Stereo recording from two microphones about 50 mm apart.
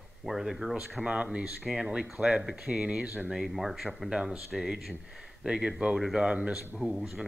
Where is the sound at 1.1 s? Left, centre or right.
Right.